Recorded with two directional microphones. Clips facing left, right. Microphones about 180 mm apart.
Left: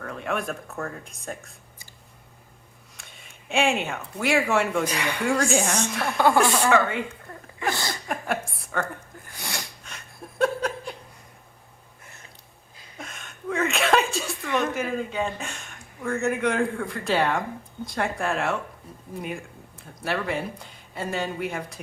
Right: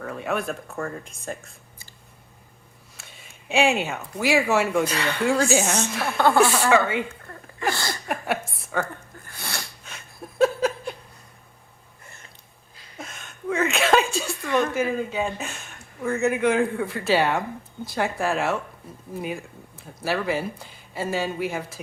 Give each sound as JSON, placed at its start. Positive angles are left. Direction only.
{"t": 0.0, "sound": "speech", "side_deg": -5}
{"t": 3.5, "sound": "speech", "side_deg": 0}
{"t": 4.9, "sound": "speech", "side_deg": 15}
{"t": 5.2, "sound": "speech", "side_deg": -5}
{"t": 6.1, "sound": "speech", "side_deg": 10}
{"t": 6.4, "sound": "speech", "side_deg": -5}
{"t": 8.0, "sound": "a sound", "side_deg": -5}
{"t": 9.2, "sound": "sneeze", "side_deg": 15}
{"t": 9.8, "sound": "chuckle", "side_deg": 0}
{"t": 13.0, "sound": "a sound", "side_deg": 0}
{"t": 14.5, "sound": "a woman's voice", "side_deg": 0}